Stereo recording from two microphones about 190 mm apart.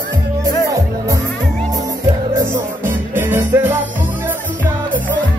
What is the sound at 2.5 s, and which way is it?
Music, 10° right (ahead or behind).